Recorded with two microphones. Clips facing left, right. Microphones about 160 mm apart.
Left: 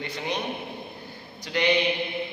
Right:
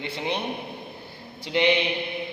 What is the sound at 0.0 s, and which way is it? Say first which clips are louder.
Speech: right 1 dB; 25° right (ahead or behind).